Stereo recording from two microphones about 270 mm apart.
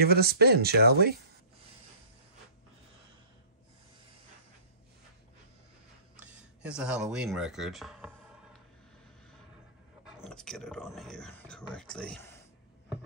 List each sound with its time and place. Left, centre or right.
0.0 s speech: right
6.1 s speech: centre
10.0 s speech: centre